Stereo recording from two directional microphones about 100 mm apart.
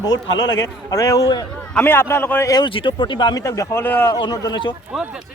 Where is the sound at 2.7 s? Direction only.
55° left (ahead or behind).